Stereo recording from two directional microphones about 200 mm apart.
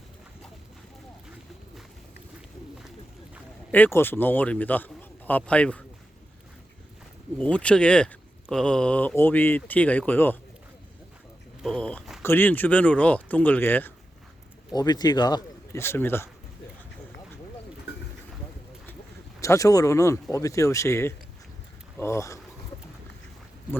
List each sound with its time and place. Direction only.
3.7 s a man's voice: 10° left (ahead or behind)
7.3 s speech: 5° left (ahead or behind)
11.6 s speech: 5° left (ahead or behind)
14.7 s speech: 20° left (ahead or behind)
19.4 s speech: 15° left (ahead or behind)